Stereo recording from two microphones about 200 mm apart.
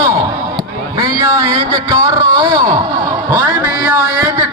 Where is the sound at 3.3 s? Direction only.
20° right (ahead or behind).